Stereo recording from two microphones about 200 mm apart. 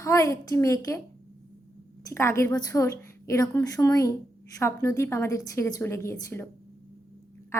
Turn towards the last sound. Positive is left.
turn(degrees=15)  # may be behind; listen again after turning